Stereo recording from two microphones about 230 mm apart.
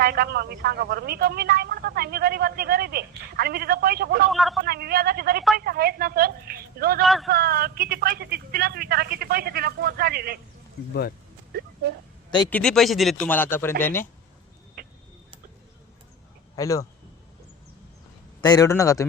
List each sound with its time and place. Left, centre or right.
0.0 s speech: right
4.3 s speech: centre
4.6 s a woman's voice: right
5.5 s a sound: right
7.0 s speech: centre
7.3 s a woman's voice: right
12.5 s a man's voice: centre
14.8 s vehicle: right
16.6 s a man's voice: centre
18.4 s a man's voice: centre